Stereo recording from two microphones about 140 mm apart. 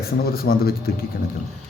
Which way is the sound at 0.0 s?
90° left.